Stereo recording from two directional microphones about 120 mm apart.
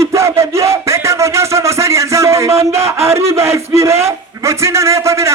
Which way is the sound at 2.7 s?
25° right (ahead or behind).